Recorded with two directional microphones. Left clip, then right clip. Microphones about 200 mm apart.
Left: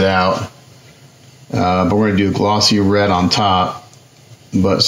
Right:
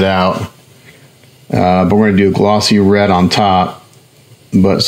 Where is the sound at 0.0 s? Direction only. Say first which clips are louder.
Right 2 dB; 65° right (ahead or behind).